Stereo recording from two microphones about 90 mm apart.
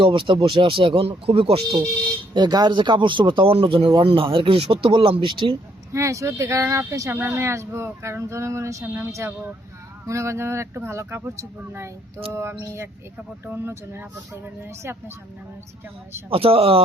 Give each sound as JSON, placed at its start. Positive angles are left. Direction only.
{"t": 0.0, "sound": "speech", "side_deg": -70}
{"t": 2.3, "sound": "speech", "side_deg": -50}
{"t": 5.9, "sound": "speech", "side_deg": -35}
{"t": 16.3, "sound": "speech", "side_deg": -90}